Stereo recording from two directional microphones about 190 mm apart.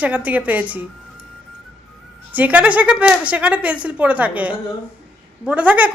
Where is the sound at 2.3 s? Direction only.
10° right (ahead or behind).